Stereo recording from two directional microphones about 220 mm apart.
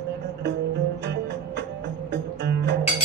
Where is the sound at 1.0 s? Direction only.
50° right (ahead or behind).